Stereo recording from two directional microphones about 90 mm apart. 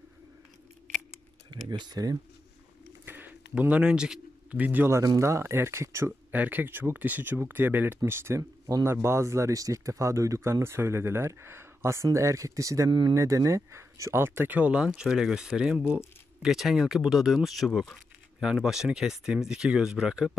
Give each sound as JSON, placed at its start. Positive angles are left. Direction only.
{"t": 1.5, "sound": "speech", "side_deg": -55}
{"t": 3.1, "sound": "bird", "side_deg": -20}
{"t": 4.8, "sound": "speech", "side_deg": -35}
{"t": 6.3, "sound": "speech", "side_deg": -20}